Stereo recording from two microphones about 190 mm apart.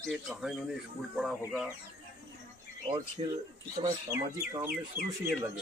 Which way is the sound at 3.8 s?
15° right (ahead or behind).